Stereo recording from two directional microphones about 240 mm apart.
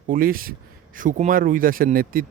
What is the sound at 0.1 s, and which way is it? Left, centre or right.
Speech, right.